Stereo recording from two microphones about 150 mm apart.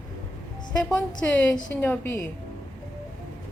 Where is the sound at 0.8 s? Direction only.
5° left (ahead or behind).